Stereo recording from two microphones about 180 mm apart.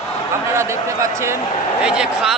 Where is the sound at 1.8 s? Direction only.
5° right (ahead or behind).